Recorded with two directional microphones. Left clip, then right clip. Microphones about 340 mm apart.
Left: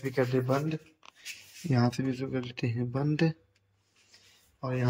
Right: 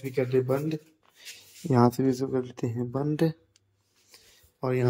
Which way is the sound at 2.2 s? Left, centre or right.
Centre.